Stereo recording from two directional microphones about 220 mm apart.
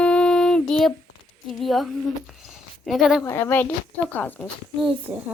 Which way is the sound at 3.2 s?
10° left (ahead or behind).